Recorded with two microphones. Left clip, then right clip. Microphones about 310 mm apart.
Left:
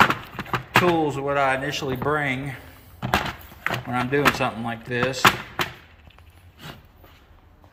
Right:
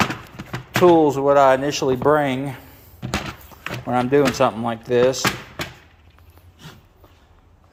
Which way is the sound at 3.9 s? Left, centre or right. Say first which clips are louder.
Right 4 dB; centre.